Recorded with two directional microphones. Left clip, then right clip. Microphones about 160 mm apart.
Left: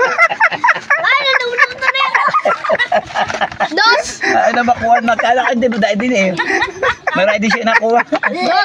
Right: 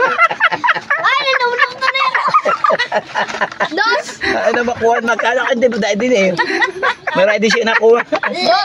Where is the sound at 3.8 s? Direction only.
60° left (ahead or behind).